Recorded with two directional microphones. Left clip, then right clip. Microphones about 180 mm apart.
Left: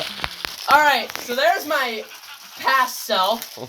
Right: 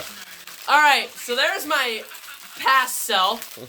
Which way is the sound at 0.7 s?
15° right (ahead or behind).